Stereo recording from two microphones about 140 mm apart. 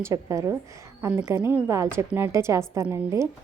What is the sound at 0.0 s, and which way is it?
A woman's voice, 20° right (ahead or behind).